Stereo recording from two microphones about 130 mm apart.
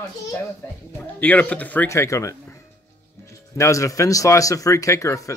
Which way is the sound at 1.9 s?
25° left (ahead or behind).